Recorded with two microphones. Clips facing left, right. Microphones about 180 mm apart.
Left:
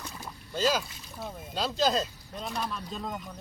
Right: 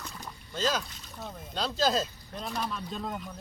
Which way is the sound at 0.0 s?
10° left (ahead or behind).